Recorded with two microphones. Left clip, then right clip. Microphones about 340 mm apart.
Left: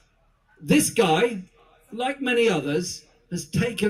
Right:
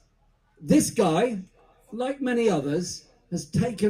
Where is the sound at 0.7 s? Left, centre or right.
Left.